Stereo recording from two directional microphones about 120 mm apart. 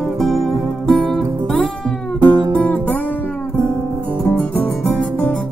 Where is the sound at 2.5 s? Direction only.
15° left (ahead or behind).